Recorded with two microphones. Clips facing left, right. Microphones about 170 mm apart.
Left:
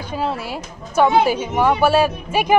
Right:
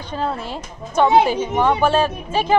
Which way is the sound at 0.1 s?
10° left (ahead or behind).